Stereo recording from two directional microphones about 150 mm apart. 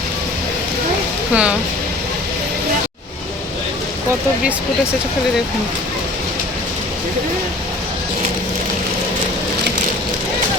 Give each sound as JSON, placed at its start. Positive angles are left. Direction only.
{"t": 1.3, "sound": "speech", "side_deg": -10}